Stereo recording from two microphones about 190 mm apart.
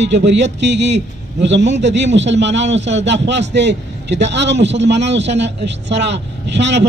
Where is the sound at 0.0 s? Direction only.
65° right (ahead or behind).